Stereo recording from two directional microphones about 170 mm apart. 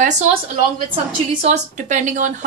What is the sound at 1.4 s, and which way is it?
Speech, 45° right (ahead or behind).